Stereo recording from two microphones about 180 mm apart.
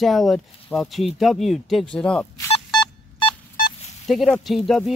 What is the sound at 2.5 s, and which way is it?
Telephone dialing, 25° left (ahead or behind).